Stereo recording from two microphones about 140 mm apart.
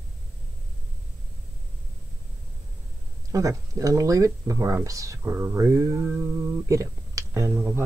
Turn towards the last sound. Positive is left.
turn(degrees=-15)  # may be behind; listen again after turning